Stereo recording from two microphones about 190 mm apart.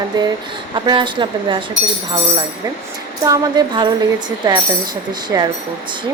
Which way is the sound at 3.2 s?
20° right (ahead or behind).